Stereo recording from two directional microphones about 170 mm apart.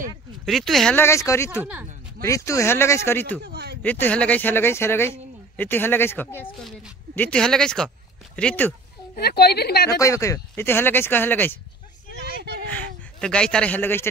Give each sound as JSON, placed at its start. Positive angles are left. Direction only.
{"t": 0.5, "sound": "speech", "side_deg": 0}
{"t": 0.9, "sound": "speech", "side_deg": 15}
{"t": 1.6, "sound": "speech", "side_deg": -10}
{"t": 2.2, "sound": "speech", "side_deg": 20}
{"t": 3.4, "sound": "speech", "side_deg": -75}
{"t": 3.8, "sound": "speech", "side_deg": 10}
{"t": 9.1, "sound": "a woman's voice", "side_deg": 70}
{"t": 9.8, "sound": "speech", "side_deg": 20}
{"t": 12.6, "sound": "speech", "side_deg": 5}